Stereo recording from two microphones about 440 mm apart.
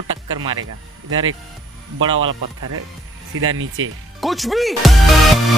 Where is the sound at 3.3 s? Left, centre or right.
Right.